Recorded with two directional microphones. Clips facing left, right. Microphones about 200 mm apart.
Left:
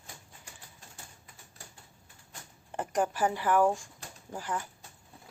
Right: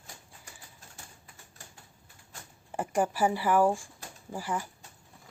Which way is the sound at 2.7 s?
10° right (ahead or behind).